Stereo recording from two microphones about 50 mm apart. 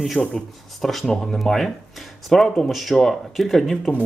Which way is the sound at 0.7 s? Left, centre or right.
Centre.